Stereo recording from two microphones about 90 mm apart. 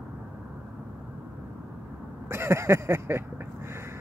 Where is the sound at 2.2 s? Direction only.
30° right (ahead or behind).